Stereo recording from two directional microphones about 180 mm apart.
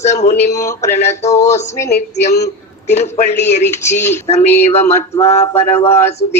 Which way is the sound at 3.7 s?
15° left (ahead or behind).